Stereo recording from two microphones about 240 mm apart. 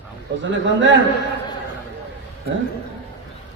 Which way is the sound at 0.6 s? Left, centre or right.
Right.